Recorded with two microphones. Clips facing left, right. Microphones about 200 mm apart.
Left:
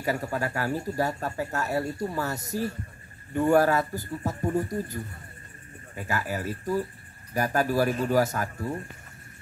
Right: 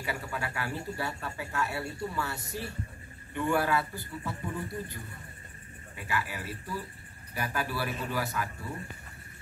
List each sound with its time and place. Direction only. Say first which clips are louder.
0.0 s a man's voice: left 7 dB; 40° left (ahead or behind)
5.9 s a man's voice: left 5 dB; 45° left (ahead or behind)